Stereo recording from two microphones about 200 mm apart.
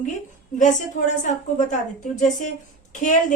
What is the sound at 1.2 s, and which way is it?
Speech, 40° left (ahead or behind).